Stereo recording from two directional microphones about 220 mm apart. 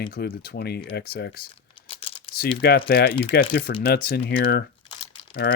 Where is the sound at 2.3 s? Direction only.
45° left (ahead or behind).